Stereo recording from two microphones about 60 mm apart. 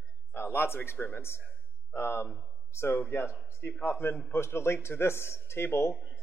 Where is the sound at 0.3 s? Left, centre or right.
Left.